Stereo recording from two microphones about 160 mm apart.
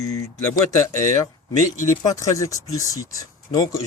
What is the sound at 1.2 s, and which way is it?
Speech, 25° left (ahead or behind).